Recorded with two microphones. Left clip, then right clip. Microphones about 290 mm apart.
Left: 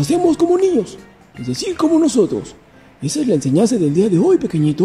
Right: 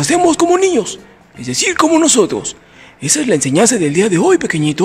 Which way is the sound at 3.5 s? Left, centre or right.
Right.